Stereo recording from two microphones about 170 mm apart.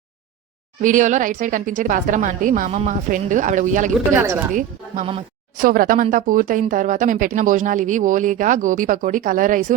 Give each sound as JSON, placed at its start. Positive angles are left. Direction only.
{"t": 0.8, "sound": "speech", "side_deg": -50}
{"t": 4.1, "sound": "speech", "side_deg": -15}
{"t": 5.5, "sound": "speech", "side_deg": -55}